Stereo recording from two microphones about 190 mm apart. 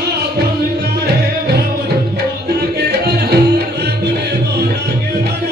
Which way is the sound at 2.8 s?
60° right (ahead or behind).